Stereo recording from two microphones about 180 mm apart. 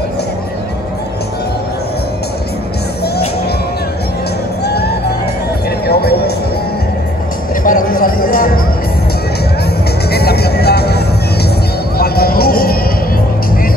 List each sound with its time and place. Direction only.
4.6 s music: 65° left (ahead or behind)
7.6 s music: 50° left (ahead or behind)
10.1 s music: 60° left (ahead or behind)